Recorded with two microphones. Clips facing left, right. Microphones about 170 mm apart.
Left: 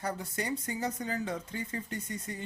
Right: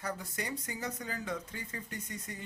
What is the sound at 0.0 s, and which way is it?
Speech, 30° left (ahead or behind).